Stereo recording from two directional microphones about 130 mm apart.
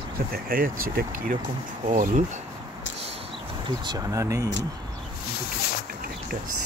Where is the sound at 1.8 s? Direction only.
70° right (ahead or behind).